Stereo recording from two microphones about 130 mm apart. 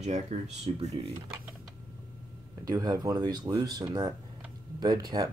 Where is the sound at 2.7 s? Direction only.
30° right (ahead or behind).